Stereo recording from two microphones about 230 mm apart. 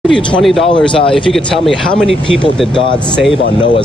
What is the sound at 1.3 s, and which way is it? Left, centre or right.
Speech, centre.